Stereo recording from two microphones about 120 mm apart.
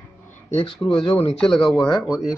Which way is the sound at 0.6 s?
50° left (ahead or behind).